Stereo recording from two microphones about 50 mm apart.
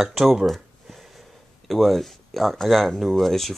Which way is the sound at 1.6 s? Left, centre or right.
Centre.